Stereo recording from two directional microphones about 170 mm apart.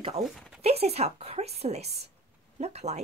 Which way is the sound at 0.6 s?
35° right (ahead or behind).